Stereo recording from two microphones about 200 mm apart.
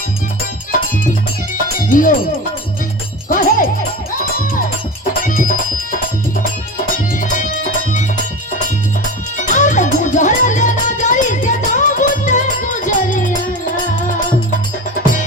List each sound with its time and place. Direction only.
1.9 s speech: 40° left (ahead or behind)
3.2 s music: 45° left (ahead or behind)
5.2 s music: 40° left (ahead or behind)
7.2 s music: 40° left (ahead or behind)
9.4 s music: 40° left (ahead or behind)